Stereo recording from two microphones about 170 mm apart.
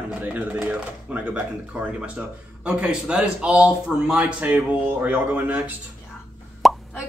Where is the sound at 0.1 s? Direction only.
10° right (ahead or behind).